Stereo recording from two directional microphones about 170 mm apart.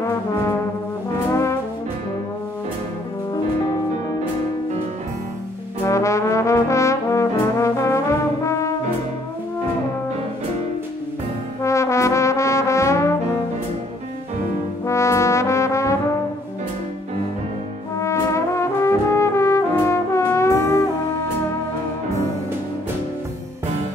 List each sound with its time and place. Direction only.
1.3 s brass instrument: 15° left (ahead or behind)
5.9 s trombone: 15° left (ahead or behind)
8.5 s brass instrument: 20° left (ahead or behind)
11.6 s trombone: 15° left (ahead or behind)
14.9 s trombone: 15° left (ahead or behind)
17.9 s brass instrument: 15° left (ahead or behind)